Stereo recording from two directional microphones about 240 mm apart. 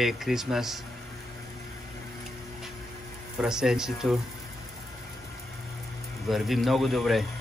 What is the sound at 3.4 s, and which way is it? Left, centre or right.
Speech, centre.